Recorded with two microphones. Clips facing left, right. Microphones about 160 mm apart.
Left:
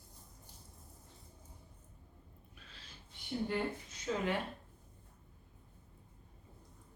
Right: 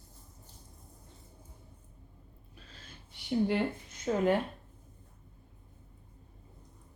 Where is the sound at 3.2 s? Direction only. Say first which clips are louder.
Right 8 dB; 90° right.